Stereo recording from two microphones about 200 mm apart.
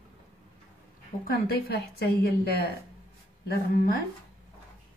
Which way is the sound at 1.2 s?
50° left (ahead or behind).